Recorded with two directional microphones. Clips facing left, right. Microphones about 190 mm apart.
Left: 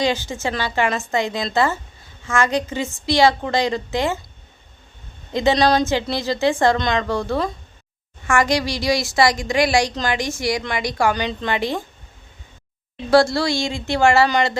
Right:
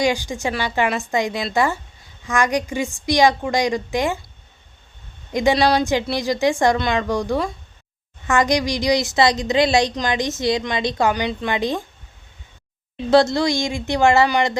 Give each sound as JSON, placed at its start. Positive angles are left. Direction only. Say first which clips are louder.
{"t": 0.0, "sound": "a woman's voice", "louder": "right 1 dB", "side_deg": -15}
{"t": 5.3, "sound": "a woman's voice", "louder": "even", "side_deg": -15}
{"t": 13.1, "sound": "a woman's voice", "louder": "even", "side_deg": -20}